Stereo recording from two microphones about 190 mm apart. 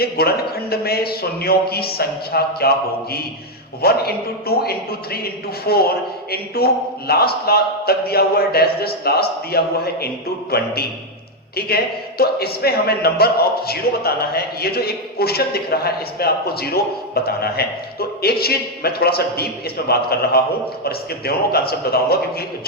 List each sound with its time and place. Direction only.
0.0 s a man's voice: 55° left (ahead or behind)
3.8 s a man's voice: 55° left (ahead or behind)
11.5 s a man's voice: 55° left (ahead or behind)